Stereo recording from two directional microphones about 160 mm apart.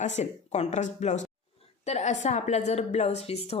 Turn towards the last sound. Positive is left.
turn(degrees=40)  # may be behind; listen again after turning